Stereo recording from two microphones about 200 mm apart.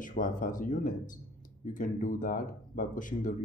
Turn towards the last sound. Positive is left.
turn(degrees=40)  # may be behind; listen again after turning